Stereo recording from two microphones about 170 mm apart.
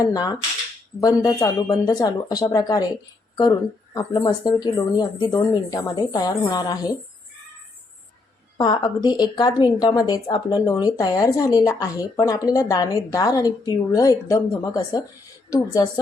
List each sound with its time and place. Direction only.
0.0 s a woman's voice: 20° left (ahead or behind)
8.5 s a woman's voice: 25° left (ahead or behind)